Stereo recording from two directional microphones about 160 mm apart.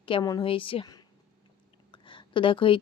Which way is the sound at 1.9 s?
30° left (ahead or behind).